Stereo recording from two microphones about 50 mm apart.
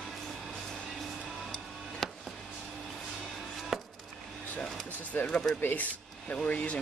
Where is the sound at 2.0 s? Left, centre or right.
Centre.